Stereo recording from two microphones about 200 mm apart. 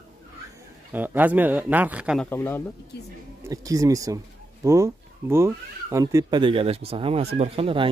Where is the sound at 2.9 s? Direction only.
55° left (ahead or behind).